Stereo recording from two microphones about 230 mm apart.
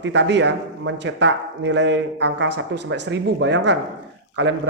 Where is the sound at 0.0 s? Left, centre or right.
Right.